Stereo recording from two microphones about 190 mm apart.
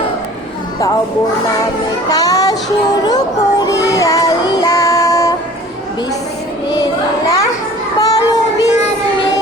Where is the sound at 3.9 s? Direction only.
20° left (ahead or behind).